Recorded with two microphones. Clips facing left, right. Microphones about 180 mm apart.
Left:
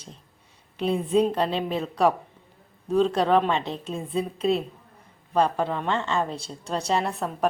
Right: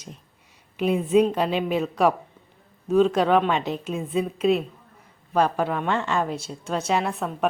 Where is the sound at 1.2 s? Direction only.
5° right (ahead or behind).